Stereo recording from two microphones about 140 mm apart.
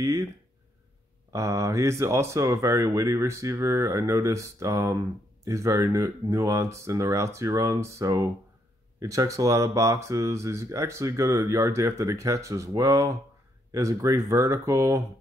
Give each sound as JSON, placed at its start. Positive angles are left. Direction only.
{"t": 0.0, "sound": "speech", "side_deg": -25}
{"t": 1.3, "sound": "speech", "side_deg": -20}